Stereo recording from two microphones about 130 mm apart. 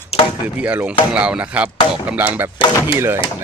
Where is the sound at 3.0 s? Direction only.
20° right (ahead or behind).